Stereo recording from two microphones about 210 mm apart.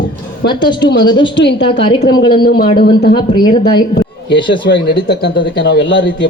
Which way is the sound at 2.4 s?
45° left (ahead or behind).